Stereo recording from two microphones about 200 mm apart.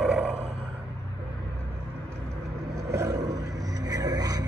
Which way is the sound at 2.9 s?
15° right (ahead or behind).